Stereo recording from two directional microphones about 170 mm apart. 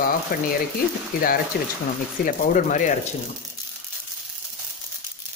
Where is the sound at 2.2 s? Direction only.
50° left (ahead or behind).